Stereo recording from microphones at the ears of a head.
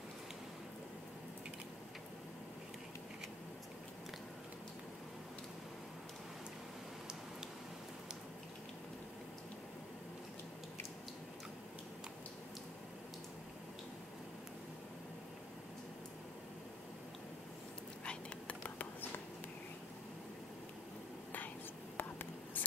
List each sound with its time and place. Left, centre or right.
21.9 s whispering: left